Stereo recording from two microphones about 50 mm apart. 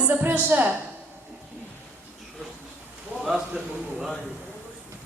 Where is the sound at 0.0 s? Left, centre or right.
Right.